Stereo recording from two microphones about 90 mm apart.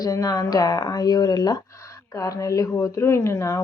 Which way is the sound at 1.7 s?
35° left (ahead or behind).